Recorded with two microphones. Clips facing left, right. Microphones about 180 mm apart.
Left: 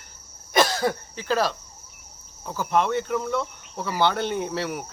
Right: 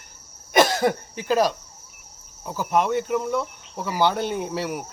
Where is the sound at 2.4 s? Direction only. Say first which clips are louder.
Right 1 dB; 10° right (ahead or behind).